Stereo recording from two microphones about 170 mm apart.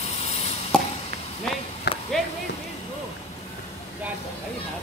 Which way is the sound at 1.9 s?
75° left (ahead or behind).